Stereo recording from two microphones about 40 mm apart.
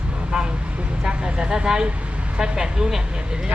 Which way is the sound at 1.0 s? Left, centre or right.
Right.